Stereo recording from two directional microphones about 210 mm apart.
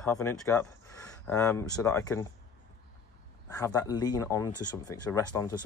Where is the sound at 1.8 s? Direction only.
15° left (ahead or behind).